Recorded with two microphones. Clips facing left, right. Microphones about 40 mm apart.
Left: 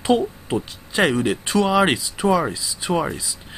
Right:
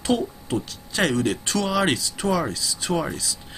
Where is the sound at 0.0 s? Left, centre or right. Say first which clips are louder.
Left 4 dB; centre.